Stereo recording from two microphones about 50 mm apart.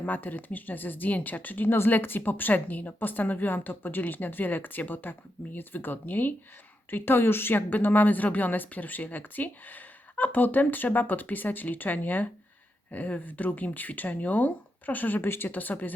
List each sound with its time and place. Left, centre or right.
0.0 s a woman's voice: left